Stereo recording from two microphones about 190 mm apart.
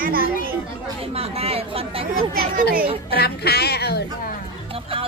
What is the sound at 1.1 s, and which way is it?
Speech, 30° right (ahead or behind).